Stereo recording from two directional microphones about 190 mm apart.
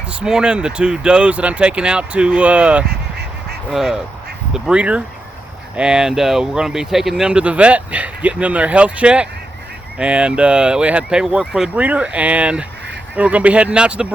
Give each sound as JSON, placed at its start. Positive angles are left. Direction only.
{"t": 0.2, "sound": "speech", "side_deg": -5}